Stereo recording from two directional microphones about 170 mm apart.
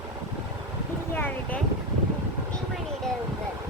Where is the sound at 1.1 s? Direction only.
10° left (ahead or behind).